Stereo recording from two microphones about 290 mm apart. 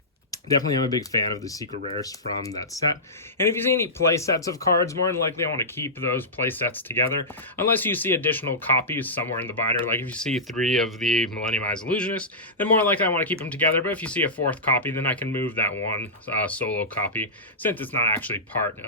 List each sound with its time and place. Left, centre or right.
0.3 s speech: centre